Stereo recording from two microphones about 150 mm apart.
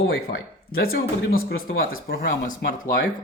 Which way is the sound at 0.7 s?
90° left.